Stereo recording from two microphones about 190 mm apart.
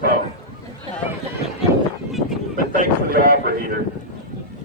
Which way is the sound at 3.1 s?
55° right (ahead or behind).